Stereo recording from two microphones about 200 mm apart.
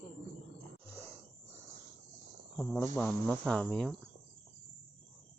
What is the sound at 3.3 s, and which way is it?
Cricket, centre (ahead or behind).